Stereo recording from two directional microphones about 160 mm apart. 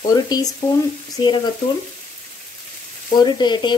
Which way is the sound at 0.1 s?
25° left (ahead or behind).